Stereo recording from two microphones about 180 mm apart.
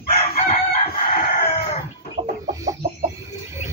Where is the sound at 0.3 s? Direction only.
35° left (ahead or behind).